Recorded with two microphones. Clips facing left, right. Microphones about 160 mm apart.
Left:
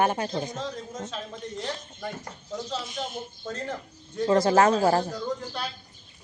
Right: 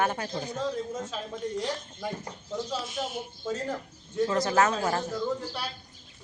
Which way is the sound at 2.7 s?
5° right (ahead or behind).